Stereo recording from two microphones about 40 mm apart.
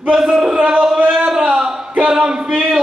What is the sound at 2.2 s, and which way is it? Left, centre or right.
Speech, centre.